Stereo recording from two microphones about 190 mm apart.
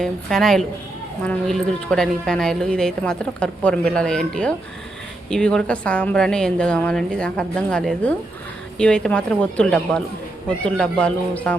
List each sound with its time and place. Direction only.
0.0 s a woman's voice: centre (ahead or behind)